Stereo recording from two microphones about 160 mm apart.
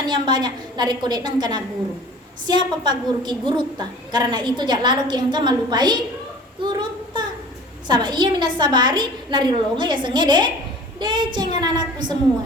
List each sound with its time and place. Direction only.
0.0 s a woman's voice: 25° right (ahead or behind)
6.6 s child singing: 30° right (ahead or behind)
7.9 s a woman's voice: 30° right (ahead or behind)